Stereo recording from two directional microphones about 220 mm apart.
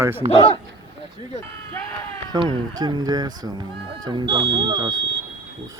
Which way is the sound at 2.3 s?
20° right (ahead or behind).